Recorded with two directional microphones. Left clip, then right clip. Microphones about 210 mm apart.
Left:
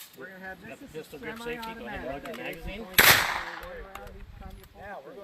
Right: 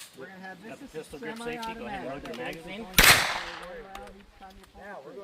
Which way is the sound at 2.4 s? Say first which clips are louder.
Right 1 dB; 20° left (ahead or behind).